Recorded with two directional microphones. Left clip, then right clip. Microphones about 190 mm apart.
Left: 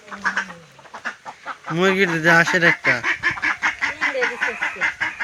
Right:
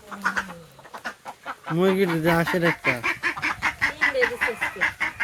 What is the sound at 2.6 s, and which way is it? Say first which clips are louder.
Goose: left 6 dB; 15° left (ahead or behind).